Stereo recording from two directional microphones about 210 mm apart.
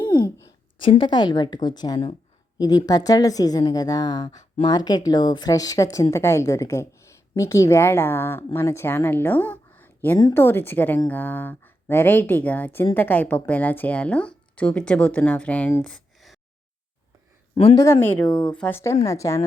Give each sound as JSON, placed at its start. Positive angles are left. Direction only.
{"t": 0.1, "sound": "a woman's voice", "side_deg": 20}
{"t": 17.5, "sound": "speech", "side_deg": 25}
{"t": 17.7, "sound": "a woman's voice", "side_deg": 10}
{"t": 18.3, "sound": "speech", "side_deg": 20}
{"t": 18.5, "sound": "a woman's voice", "side_deg": 10}